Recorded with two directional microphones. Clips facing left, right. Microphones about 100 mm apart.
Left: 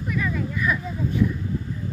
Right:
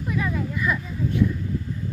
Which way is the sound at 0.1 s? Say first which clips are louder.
Even; 25° right (ahead or behind).